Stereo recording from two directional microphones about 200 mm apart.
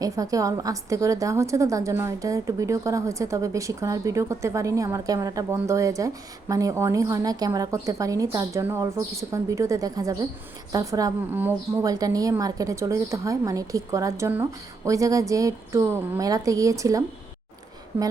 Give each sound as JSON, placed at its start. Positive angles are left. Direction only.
{"t": 0.0, "sound": "a woman's voice", "side_deg": -15}